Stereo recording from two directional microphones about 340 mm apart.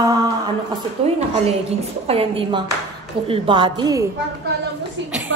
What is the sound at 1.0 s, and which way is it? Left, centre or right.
A woman's voice, centre.